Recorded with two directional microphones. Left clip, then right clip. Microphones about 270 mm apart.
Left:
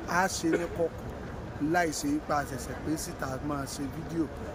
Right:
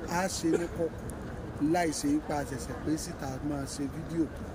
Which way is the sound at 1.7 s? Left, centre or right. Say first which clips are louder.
Left 1 dB; centre.